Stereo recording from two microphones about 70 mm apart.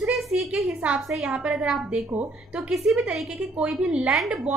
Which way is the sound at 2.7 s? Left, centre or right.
Centre.